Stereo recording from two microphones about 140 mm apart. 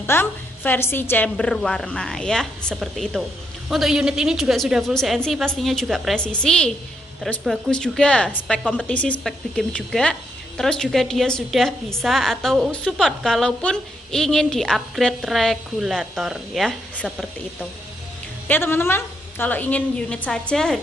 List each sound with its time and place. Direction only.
0.0 s a woman's voice: 15° left (ahead or behind)
18.5 s a woman's voice: 15° left (ahead or behind)